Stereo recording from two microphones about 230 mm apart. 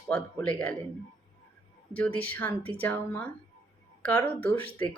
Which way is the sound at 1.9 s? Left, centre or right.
Centre.